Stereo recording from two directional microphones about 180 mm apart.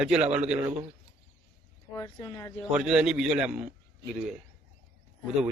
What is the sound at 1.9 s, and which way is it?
Speech, 20° left (ahead or behind).